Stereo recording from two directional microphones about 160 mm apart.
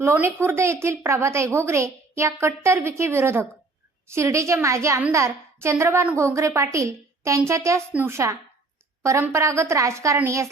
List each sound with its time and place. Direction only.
0.0 s a woman's voice: 15° right (ahead or behind)